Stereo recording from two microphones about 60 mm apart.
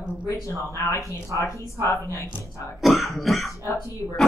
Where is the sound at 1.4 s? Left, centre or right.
Left.